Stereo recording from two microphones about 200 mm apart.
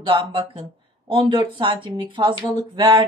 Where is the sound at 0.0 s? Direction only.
25° right (ahead or behind).